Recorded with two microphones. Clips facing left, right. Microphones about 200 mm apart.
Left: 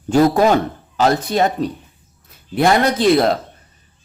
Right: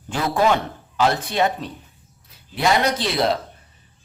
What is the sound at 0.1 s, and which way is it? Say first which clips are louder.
Speech: left 7 dB; 40° left (ahead or behind).